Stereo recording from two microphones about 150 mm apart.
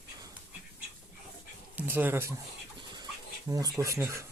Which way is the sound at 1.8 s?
10° right (ahead or behind).